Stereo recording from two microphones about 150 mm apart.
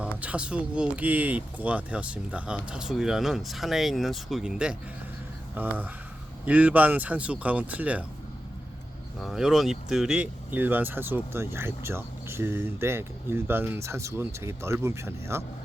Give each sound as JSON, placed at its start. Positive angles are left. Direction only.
{"t": 0.0, "sound": "speech", "side_deg": -10}
{"t": 9.2, "sound": "speech", "side_deg": 0}